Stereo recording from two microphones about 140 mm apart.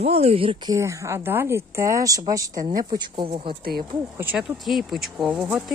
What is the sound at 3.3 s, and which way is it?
Speech, 45° right (ahead or behind).